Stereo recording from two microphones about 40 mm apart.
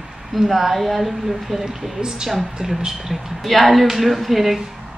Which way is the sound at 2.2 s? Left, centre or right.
Centre.